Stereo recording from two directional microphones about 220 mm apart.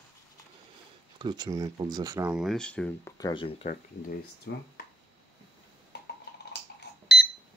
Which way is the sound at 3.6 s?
40° left (ahead or behind).